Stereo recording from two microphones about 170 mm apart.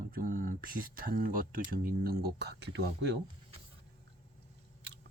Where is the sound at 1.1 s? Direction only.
55° right (ahead or behind); by 2.8 s 80° right.